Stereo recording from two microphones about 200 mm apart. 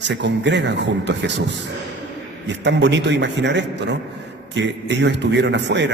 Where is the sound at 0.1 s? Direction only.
60° right (ahead or behind).